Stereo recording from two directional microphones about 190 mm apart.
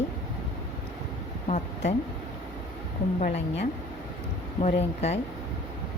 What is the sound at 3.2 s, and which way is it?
Speech, 40° left (ahead or behind).